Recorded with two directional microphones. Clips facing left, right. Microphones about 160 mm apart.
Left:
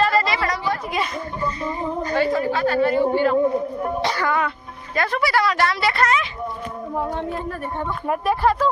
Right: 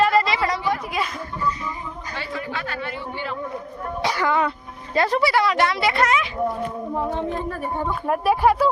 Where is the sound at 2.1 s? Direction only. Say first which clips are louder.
Left 10 dB; 45° left (ahead or behind).